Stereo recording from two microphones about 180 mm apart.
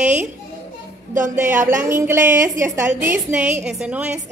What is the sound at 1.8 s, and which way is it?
A woman's voice, 15° right (ahead or behind).